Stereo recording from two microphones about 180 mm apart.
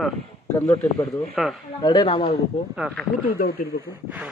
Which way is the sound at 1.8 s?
30° left (ahead or behind).